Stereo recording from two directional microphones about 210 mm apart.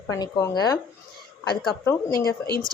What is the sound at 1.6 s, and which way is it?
Speech, centre (ahead or behind).